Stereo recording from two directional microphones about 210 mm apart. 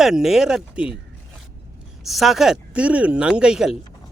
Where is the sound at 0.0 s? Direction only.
Centre (ahead or behind).